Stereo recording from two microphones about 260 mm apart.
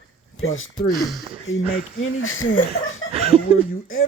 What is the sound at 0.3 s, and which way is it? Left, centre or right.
Speech, left.